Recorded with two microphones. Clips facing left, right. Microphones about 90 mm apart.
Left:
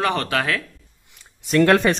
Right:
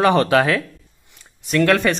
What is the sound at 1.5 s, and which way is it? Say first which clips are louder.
Speech: left 1 dB; 20° left (ahead or behind).